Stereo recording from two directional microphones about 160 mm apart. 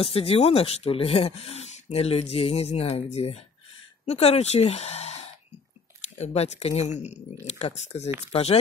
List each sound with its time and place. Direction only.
0.0 s speech: 35° left (ahead or behind)